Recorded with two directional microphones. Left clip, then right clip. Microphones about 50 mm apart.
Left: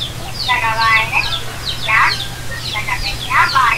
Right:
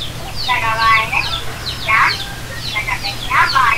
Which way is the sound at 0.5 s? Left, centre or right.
Left.